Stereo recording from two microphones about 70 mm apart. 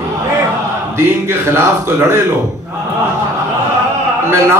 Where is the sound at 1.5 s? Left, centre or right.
Right.